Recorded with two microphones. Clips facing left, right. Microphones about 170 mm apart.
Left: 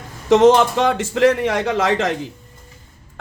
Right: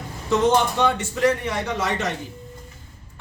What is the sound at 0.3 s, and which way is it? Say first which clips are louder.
A man's voice: left 7 dB; 90° left.